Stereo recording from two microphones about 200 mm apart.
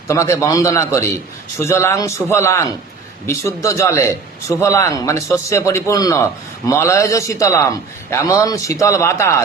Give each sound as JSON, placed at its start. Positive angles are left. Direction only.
{"t": 0.1, "sound": "a man's voice", "side_deg": 15}